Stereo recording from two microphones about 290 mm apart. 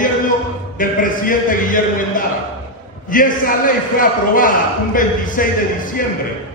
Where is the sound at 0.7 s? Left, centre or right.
Left.